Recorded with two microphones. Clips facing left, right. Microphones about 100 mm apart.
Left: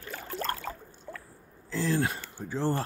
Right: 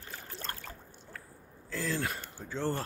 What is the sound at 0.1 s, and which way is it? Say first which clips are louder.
Boat: left 9 dB; 90° left.